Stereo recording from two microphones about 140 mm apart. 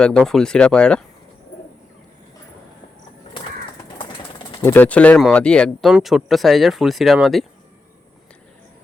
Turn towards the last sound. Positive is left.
turn(degrees=0)  # may be behind; listen again after turning